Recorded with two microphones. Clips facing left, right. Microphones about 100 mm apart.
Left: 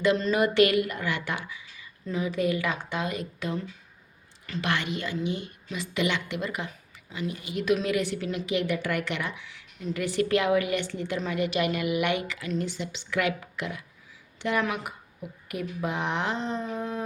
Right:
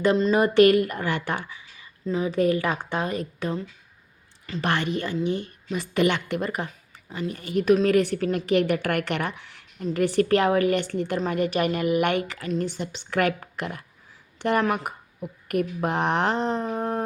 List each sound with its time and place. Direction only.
0.0 s speech: 35° right (ahead or behind)
0.5 s a woman's voice: 45° right (ahead or behind)
4.6 s speech: 35° right (ahead or behind)
5.7 s a woman's voice: 50° right (ahead or behind)
16.7 s howl: 60° right (ahead or behind)